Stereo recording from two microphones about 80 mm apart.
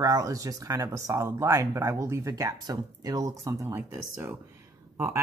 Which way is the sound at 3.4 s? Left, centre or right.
Right.